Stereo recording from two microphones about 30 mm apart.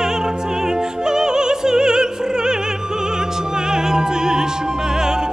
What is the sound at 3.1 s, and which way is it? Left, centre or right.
Music, right.